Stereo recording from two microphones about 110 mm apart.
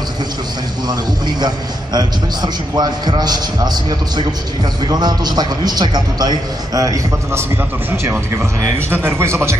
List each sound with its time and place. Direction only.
0.8 s a man's voice: 40° right (ahead or behind)
4.8 s a man's voice: 40° right (ahead or behind)
8.7 s speech: 20° right (ahead or behind)